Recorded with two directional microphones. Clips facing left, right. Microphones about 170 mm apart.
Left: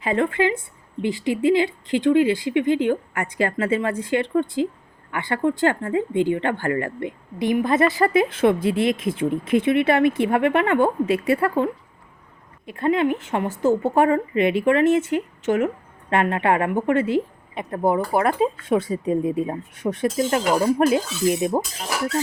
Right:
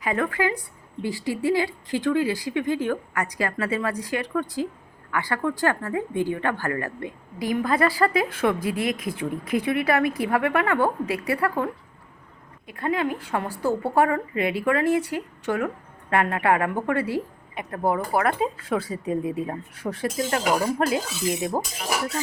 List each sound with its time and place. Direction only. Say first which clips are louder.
0.0 s a woman's voice: left 4 dB; 25° left (ahead or behind)
21.5 s speech: left 4 dB; 5° right (ahead or behind)